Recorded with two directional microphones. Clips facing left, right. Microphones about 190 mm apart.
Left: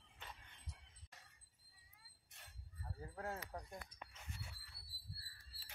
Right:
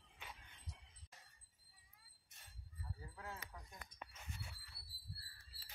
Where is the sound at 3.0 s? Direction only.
45° left (ahead or behind).